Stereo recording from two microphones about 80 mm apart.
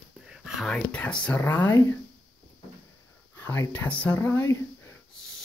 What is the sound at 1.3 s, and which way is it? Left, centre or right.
Speech, left.